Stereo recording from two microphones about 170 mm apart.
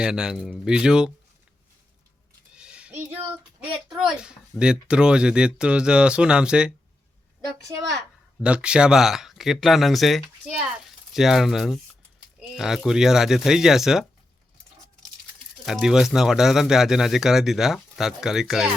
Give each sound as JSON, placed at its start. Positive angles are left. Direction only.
{"t": 0.0, "sound": "speech", "side_deg": -5}
{"t": 2.6, "sound": "a sound", "side_deg": -5}
{"t": 3.6, "sound": "speech", "side_deg": -5}
{"t": 7.7, "sound": "a woman's voice", "side_deg": -25}
{"t": 8.4, "sound": "speech", "side_deg": -5}
{"t": 15.6, "sound": "speech", "side_deg": -5}